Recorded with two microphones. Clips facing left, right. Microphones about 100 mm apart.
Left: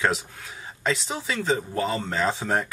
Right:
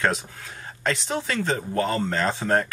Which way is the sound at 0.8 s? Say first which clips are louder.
Right 1 dB; 5° left (ahead or behind).